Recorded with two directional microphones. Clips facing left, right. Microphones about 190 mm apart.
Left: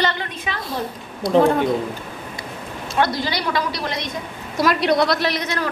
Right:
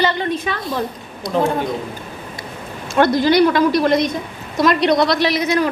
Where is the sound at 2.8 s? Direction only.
50° right (ahead or behind).